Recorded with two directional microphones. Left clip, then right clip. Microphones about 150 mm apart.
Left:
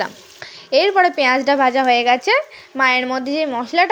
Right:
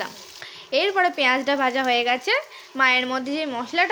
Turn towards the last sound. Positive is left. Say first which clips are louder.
# left 6 dB
turn(degrees=35)  # may be behind; listen again after turning